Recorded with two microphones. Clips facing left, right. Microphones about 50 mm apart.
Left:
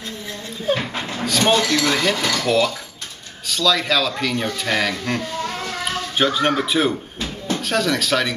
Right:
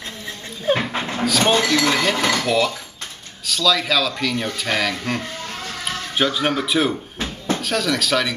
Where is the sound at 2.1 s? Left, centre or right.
Right.